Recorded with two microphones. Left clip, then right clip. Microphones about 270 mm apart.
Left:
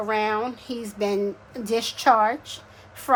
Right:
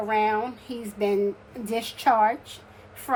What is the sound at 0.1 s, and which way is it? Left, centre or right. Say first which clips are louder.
A woman's voice: right 1 dB; centre.